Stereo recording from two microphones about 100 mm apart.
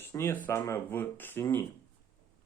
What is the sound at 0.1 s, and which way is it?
Speech, 30° left (ahead or behind).